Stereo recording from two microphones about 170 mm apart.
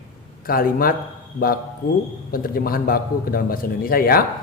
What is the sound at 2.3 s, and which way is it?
A man's voice, 60° left (ahead or behind).